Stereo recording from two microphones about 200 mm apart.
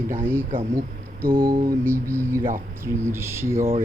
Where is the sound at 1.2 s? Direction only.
45° right (ahead or behind).